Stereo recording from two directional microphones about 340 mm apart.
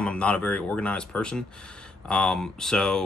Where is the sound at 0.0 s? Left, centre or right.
Centre.